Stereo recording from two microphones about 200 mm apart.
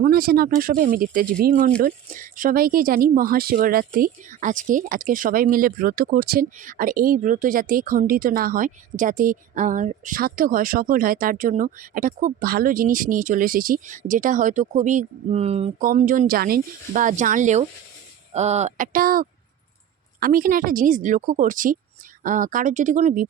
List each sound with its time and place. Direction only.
0.0 s speech: 50° right (ahead or behind); by 15.9 s 30° right (ahead or behind)
15.9 s speech: 40° right (ahead or behind)